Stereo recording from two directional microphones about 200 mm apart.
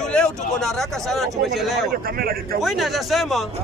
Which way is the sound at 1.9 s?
50° right (ahead or behind).